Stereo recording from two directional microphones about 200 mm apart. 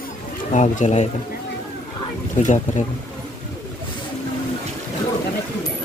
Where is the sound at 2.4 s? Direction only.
40° left (ahead or behind).